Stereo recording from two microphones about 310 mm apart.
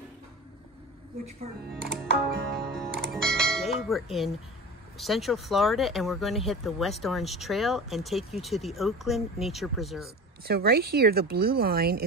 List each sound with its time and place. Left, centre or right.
1.9 s music: right
3.0 s music: centre
4.9 s speech: centre
10.4 s speech: right